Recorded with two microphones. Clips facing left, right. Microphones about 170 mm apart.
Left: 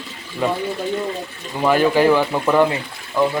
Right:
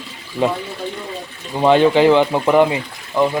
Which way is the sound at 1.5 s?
25° right (ahead or behind).